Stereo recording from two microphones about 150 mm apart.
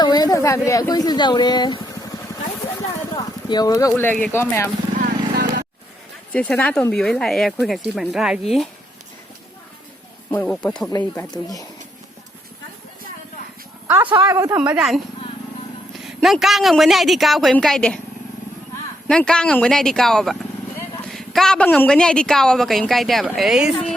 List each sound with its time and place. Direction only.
0.0 s speech: 25° left (ahead or behind)
3.2 s speech: 25° left (ahead or behind)
4.9 s vehicle: 85° right
6.3 s a woman's voice: 10° left (ahead or behind)
10.4 s a woman's voice: 5° left (ahead or behind)
14.1 s speech: 25° right (ahead or behind)
14.6 s a woman's voice: 5° right (ahead or behind)
16.0 s a woman's voice: centre (ahead or behind)
19.0 s a woman's voice: 5° left (ahead or behind)